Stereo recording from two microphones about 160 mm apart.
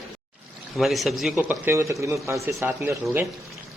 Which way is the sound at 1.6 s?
15° right (ahead or behind).